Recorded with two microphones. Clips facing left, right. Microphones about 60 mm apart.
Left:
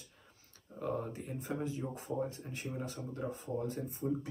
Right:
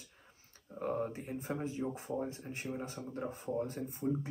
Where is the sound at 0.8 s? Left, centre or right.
Right.